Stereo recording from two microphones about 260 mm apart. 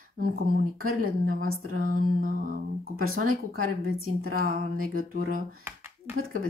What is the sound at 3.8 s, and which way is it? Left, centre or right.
Speech, right.